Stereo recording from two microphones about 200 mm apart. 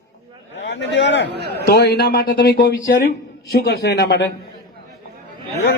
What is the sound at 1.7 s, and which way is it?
Speech, 55° left (ahead or behind).